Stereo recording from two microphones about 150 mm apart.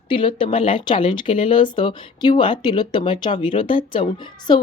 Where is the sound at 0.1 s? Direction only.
35° left (ahead or behind).